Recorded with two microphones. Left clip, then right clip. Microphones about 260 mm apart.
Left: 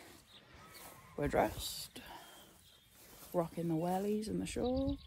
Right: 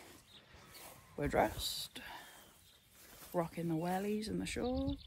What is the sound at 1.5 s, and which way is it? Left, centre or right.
Speech, centre.